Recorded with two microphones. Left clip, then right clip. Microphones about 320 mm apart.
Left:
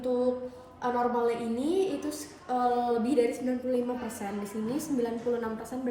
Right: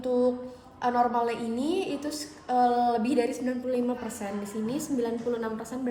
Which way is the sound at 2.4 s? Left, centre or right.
Centre.